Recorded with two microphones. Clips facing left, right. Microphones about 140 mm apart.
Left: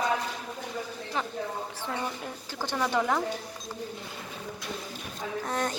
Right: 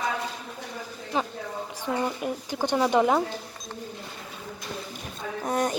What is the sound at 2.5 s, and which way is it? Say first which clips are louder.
Speech: right 5 dB; 15° right (ahead or behind).